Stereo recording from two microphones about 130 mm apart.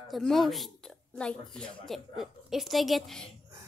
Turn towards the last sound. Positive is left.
turn(degrees=0)  # may be behind; listen again after turning